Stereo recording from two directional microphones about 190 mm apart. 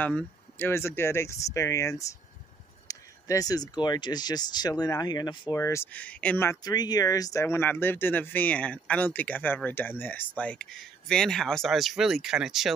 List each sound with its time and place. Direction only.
0.0 s speech: 10° left (ahead or behind)